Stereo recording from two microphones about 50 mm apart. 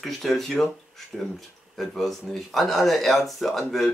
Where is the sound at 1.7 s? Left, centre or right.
Centre.